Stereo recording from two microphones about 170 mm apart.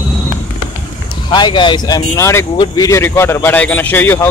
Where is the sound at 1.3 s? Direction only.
25° left (ahead or behind).